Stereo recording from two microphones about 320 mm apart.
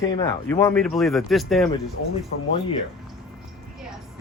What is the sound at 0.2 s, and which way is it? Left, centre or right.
Speech, centre.